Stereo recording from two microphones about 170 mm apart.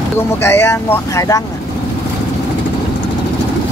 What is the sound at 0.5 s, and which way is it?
Speech, 15° left (ahead or behind).